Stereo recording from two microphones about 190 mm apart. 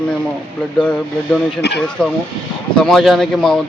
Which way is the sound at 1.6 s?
60° left (ahead or behind).